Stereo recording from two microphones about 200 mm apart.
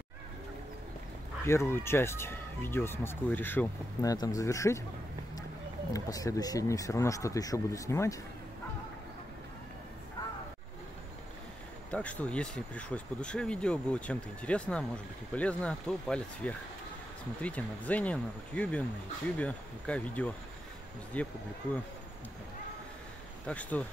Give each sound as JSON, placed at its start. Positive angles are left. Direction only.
{"t": 1.4, "sound": "speech", "side_deg": 15}
{"t": 5.9, "sound": "speech", "side_deg": 15}
{"t": 11.9, "sound": "speech", "side_deg": 5}
{"t": 23.4, "sound": "speech", "side_deg": 5}